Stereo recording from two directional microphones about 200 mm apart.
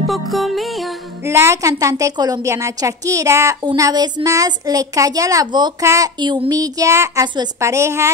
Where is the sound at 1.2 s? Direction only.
15° right (ahead or behind).